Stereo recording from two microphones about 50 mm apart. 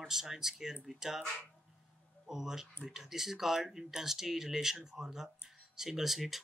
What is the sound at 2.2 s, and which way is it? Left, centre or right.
Speech, centre.